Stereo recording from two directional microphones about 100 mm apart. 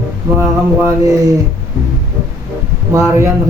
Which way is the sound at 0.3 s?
25° right (ahead or behind).